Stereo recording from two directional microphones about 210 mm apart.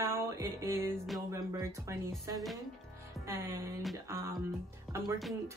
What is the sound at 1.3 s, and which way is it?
Speech, 15° right (ahead or behind).